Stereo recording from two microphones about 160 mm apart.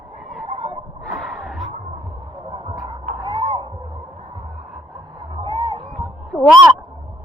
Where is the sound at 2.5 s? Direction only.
30° right (ahead or behind).